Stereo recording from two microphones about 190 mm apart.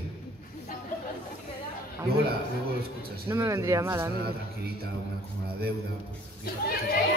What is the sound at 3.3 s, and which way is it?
Speech, 15° right (ahead or behind).